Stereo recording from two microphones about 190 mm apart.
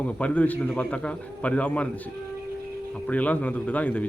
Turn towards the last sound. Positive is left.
turn(degrees=10)  # may be behind; listen again after turning